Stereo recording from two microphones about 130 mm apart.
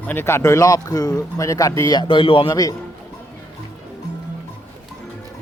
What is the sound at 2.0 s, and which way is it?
Speech, 40° left (ahead or behind).